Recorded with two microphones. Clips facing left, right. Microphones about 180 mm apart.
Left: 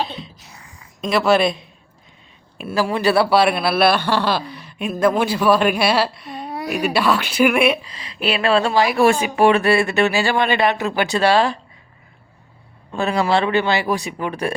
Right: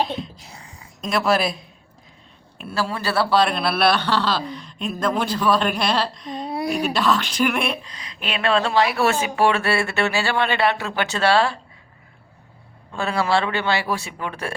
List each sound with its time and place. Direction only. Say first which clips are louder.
0.5 s a sound: right 2 dB; 30° right (ahead or behind)
1.0 s speech: left 4 dB; centre (ahead or behind)
2.6 s speech: left 5 dB; 10° left (ahead or behind)
12.9 s speech: left 3 dB; 20° left (ahead or behind)